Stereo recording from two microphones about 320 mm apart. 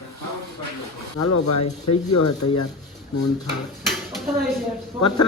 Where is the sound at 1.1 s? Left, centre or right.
Left.